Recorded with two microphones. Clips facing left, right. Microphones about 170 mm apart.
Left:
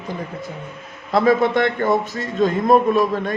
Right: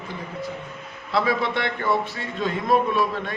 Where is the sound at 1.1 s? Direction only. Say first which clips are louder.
Left 7 dB; 45° left (ahead or behind).